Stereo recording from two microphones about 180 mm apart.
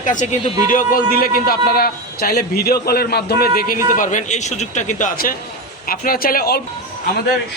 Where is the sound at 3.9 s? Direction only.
45° left (ahead or behind).